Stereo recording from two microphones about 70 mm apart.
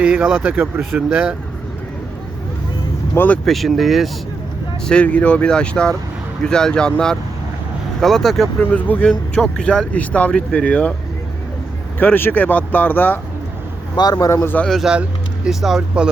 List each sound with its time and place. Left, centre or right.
0.0 s speech: centre
3.2 s speech: left
3.4 s speech: centre
4.9 s speech: centre
8.7 s speech: left
9.3 s speech: centre
11.9 s speech: left
13.9 s speech: left
14.4 s speech: left
15.4 s speech: centre